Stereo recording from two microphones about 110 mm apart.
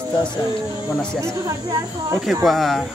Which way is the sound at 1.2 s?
25° right (ahead or behind).